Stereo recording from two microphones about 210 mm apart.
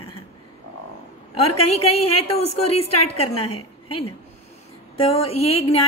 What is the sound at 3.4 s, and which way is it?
Speech, 90° left.